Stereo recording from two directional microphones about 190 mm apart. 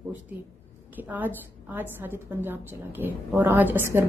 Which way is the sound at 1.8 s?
10° right (ahead or behind).